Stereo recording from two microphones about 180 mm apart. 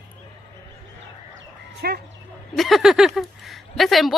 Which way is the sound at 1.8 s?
60° right (ahead or behind).